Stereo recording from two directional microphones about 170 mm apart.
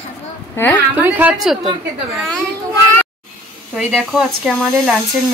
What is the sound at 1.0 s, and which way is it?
Speech, 10° right (ahead or behind).